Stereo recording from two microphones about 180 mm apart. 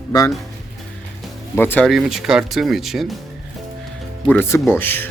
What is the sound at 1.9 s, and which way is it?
Speech, centre (ahead or behind).